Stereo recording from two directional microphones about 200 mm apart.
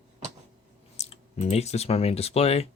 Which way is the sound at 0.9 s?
35° left (ahead or behind).